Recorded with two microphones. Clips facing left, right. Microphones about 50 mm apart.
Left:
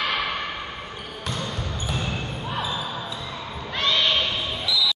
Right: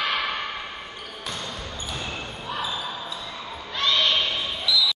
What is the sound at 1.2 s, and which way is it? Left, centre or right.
Basketball bounce, centre.